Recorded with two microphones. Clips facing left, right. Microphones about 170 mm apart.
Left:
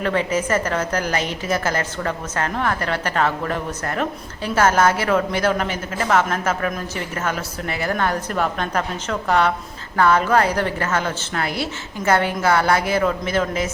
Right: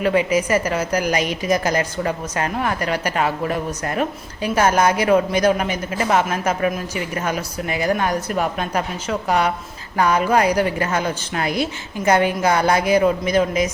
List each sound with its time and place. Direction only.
0.0 s a woman's voice: 10° right (ahead or behind)